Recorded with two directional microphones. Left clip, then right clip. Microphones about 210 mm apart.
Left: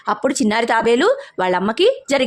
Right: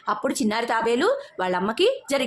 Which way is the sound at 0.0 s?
30° left (ahead or behind).